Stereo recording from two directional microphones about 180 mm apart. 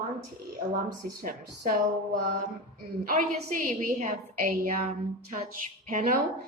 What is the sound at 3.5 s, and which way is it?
A woman's voice, 40° right (ahead or behind).